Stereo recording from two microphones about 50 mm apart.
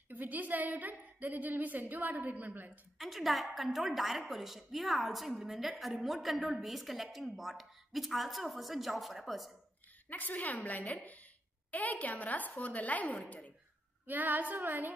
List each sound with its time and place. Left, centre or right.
0.1 s a woman's voice: right
3.0 s a woman's voice: centre
10.0 s a woman's voice: left
14.0 s a woman's voice: right